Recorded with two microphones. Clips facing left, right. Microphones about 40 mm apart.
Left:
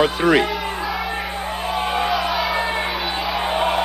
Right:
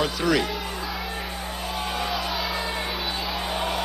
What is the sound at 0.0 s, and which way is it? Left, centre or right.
Speech, left.